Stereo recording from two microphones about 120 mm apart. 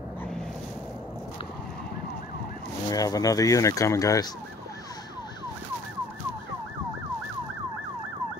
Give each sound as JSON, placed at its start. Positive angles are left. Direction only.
{"t": 2.9, "sound": "speech", "side_deg": 30}